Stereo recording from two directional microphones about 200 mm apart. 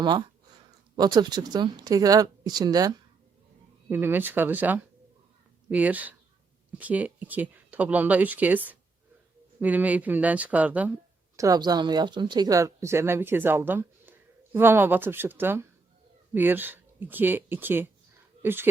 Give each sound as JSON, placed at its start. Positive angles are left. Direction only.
{"t": 0.0, "sound": "speech", "side_deg": -20}